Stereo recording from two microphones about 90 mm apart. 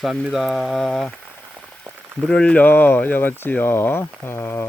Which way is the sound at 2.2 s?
10° left (ahead or behind).